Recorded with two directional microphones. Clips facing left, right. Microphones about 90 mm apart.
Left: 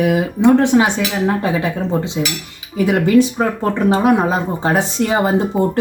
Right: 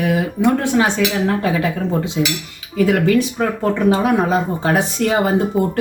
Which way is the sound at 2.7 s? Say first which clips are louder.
Left 2 dB; 20° left (ahead or behind).